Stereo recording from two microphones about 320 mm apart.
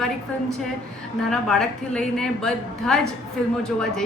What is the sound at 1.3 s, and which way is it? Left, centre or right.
A woman's voice, centre.